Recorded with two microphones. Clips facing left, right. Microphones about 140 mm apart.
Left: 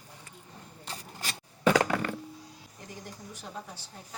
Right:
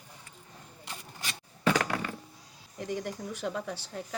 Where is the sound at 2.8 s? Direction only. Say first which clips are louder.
Right 11 dB; 75° right (ahead or behind).